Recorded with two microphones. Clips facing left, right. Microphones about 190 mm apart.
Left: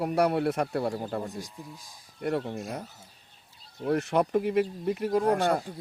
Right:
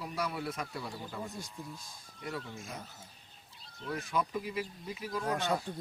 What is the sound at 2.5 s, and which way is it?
Speech, 65° left (ahead or behind).